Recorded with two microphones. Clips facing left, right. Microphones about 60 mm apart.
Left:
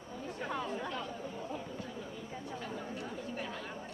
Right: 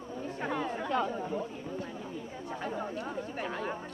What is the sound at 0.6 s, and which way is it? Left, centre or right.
Chatter, right.